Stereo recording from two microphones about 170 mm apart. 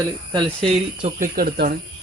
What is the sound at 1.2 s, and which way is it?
Speech, 60° right (ahead or behind).